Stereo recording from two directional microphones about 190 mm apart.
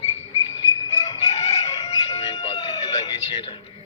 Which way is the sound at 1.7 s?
35° left (ahead or behind).